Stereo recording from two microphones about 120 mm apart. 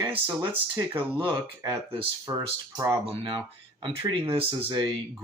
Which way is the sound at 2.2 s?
30° right (ahead or behind).